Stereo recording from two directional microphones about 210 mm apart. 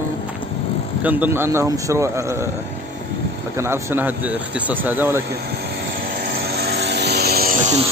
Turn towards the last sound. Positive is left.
turn(degrees=-35)  # may be behind; listen again after turning